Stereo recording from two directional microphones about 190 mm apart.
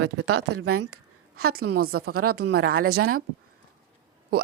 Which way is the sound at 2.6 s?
90° right.